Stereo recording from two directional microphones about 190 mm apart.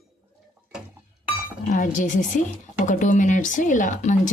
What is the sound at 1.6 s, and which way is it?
A woman's voice, 45° left (ahead or behind).